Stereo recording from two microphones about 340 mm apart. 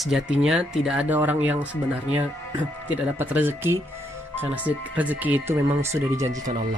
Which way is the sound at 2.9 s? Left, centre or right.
Centre.